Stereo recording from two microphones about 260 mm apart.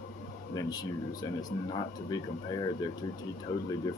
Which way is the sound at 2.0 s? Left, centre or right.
Centre.